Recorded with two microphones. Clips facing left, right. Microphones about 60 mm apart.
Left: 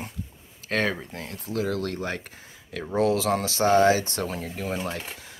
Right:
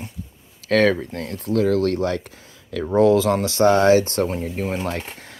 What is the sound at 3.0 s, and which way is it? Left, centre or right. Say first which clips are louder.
Speech: right 7 dB; right.